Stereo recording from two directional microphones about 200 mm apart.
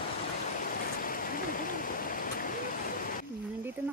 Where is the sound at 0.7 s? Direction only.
45° left (ahead or behind).